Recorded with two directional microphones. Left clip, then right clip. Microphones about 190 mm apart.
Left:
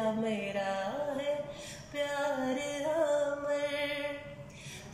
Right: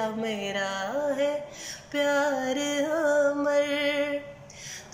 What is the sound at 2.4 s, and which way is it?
Music, 20° left (ahead or behind).